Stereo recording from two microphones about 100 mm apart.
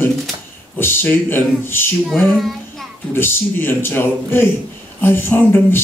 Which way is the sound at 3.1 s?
20° left (ahead or behind).